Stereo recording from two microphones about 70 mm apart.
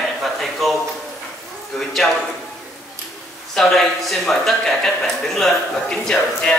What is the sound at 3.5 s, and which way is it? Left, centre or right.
A man's voice, centre.